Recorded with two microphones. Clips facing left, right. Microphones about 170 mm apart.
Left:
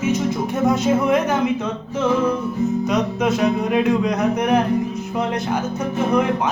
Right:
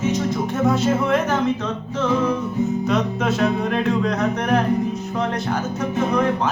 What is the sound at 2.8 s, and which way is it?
Music, centre (ahead or behind).